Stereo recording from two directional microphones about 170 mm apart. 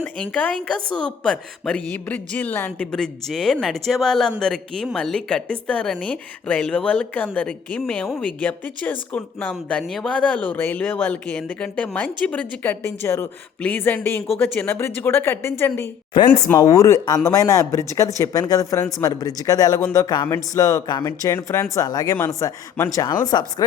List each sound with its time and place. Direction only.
0.0 s a woman's voice: 10° left (ahead or behind)